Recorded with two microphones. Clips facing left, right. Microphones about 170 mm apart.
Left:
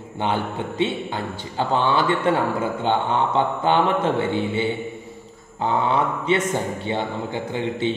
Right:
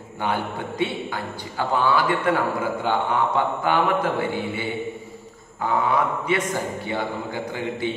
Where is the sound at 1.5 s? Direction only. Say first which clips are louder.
Left 1 dB; 25° left (ahead or behind).